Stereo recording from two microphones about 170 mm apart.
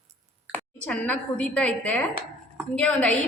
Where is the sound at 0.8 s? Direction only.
10° left (ahead or behind).